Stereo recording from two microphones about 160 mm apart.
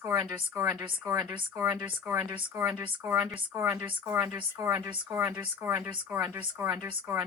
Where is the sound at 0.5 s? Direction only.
15° right (ahead or behind).